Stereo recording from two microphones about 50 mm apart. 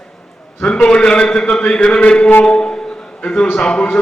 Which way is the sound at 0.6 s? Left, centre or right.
Centre.